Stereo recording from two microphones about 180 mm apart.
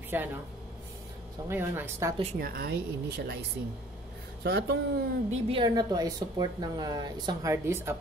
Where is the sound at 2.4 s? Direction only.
60° right (ahead or behind).